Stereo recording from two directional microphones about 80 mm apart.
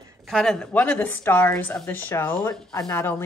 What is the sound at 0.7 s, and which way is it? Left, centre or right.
Speech, left.